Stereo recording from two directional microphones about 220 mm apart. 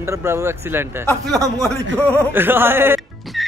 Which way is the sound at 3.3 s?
Centre (ahead or behind).